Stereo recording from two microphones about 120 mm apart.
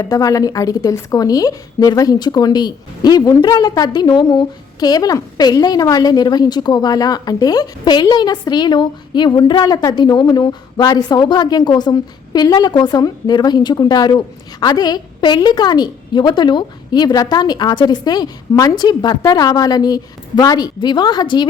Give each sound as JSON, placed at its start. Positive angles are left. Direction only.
{"t": 0.0, "sound": "a woman's voice", "side_deg": 30}